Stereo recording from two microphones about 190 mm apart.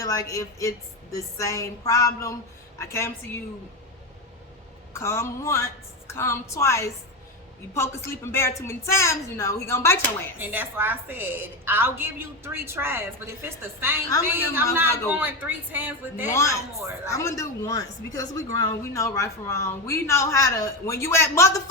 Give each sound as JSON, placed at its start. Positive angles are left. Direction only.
{"t": 0.0, "sound": "a woman's voice", "side_deg": 15}
{"t": 4.9, "sound": "a woman's voice", "side_deg": 15}
{"t": 10.3, "sound": "a woman's voice", "side_deg": -10}
{"t": 16.3, "sound": "a woman's voice", "side_deg": 15}